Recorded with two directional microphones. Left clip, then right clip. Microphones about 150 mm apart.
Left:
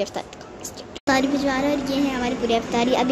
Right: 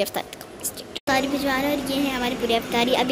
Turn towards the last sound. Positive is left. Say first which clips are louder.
# even
turn(degrees=10)  # may be behind; listen again after turning